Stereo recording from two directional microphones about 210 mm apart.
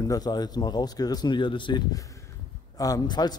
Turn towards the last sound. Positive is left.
turn(degrees=20)  # may be behind; listen again after turning